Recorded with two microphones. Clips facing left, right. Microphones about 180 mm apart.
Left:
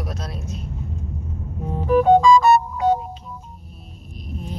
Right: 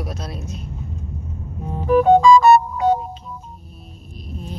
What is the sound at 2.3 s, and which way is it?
Music, 60° right (ahead or behind).